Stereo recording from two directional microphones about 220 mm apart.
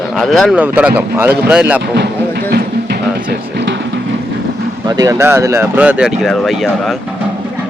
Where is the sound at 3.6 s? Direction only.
50° right (ahead or behind).